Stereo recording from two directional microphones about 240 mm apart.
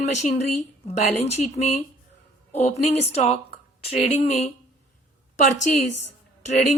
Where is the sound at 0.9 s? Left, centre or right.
Left.